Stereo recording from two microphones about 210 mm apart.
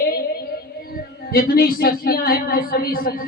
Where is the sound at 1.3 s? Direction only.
45° left (ahead or behind).